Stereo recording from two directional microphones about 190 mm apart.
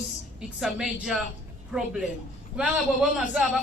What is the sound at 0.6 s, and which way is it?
Speech, centre (ahead or behind).